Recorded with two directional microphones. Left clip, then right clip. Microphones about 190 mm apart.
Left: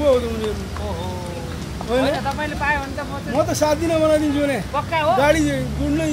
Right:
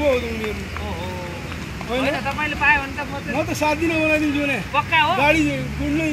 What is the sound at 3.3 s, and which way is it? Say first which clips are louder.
Speech: left 3 dB; 15° left (ahead or behind).